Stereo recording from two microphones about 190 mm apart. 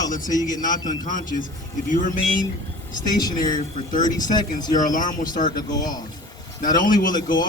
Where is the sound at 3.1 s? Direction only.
20° left (ahead or behind).